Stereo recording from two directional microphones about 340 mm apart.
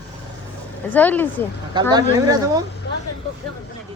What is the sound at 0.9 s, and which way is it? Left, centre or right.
Speech, centre.